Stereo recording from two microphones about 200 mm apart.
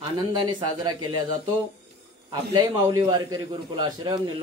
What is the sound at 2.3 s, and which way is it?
A man's voice, 20° right (ahead or behind).